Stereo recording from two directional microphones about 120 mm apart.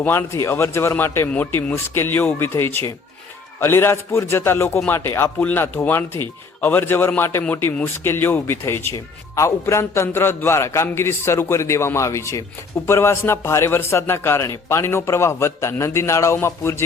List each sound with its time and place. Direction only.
0.0 s speech: 20° left (ahead or behind)